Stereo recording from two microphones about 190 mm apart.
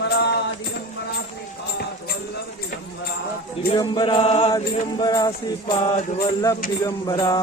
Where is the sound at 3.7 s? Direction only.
25° left (ahead or behind).